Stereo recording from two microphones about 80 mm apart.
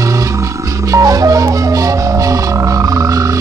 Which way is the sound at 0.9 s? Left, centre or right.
Right.